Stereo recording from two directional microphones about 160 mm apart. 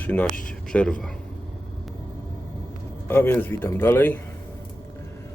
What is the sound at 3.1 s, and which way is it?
Speech, 15° left (ahead or behind).